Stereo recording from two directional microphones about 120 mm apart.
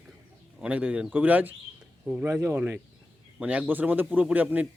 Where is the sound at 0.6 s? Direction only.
10° right (ahead or behind).